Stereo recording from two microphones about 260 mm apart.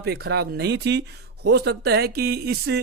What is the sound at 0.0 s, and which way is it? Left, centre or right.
Speech, right.